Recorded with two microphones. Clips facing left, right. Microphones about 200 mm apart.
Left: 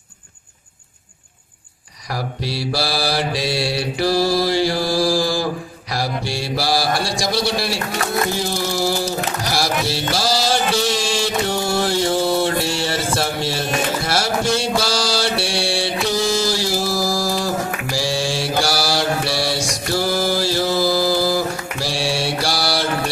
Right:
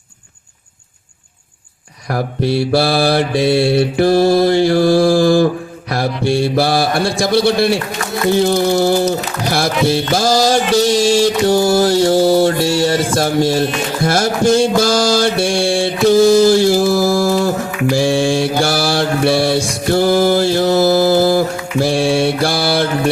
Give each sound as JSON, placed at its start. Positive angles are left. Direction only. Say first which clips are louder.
{"t": 2.0, "sound": "mantra", "louder": "right 9 dB", "side_deg": -55}
{"t": 8.4, "sound": "music", "louder": "right 9 dB", "side_deg": -55}
{"t": 13.1, "sound": "a sound", "louder": "right 8 dB", "side_deg": -45}
{"t": 14.0, "sound": "mantra", "louder": "right 7 dB", "side_deg": -45}